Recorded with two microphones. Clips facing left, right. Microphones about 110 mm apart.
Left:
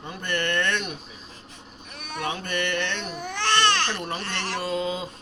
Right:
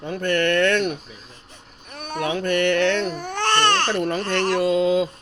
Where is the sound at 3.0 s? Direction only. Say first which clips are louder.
Right 5 dB; 45° right (ahead or behind).